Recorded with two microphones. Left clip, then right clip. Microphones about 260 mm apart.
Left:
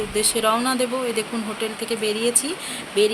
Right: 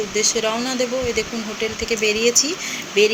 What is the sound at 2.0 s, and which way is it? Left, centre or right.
Speech, centre.